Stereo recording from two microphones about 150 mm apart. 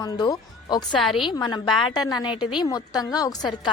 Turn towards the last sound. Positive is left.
turn(degrees=25)  # may be behind; listen again after turning